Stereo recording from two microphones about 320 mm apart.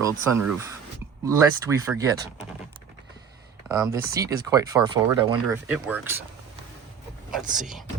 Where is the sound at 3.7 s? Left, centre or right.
Centre.